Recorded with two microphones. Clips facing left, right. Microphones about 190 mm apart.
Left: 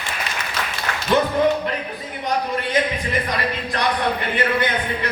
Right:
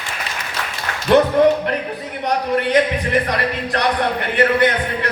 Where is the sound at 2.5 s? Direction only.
70° right (ahead or behind).